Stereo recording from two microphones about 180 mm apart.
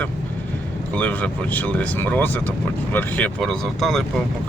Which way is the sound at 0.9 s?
10° left (ahead or behind).